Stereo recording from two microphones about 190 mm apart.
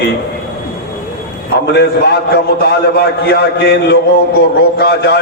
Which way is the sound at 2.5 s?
55° left (ahead or behind).